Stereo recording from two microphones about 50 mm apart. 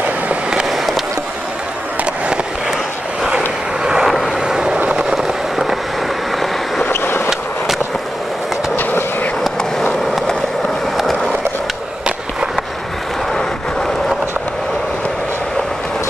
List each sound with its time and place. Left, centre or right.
0.7 s skateboard: centre
3.3 s vehicle: centre
4.1 s vehicle: centre
4.4 s vehicle: centre
4.9 s a sound: centre
6.9 s vehicle: left
8.7 s vehicle: left